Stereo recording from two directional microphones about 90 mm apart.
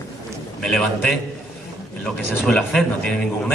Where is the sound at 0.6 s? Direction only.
10° left (ahead or behind).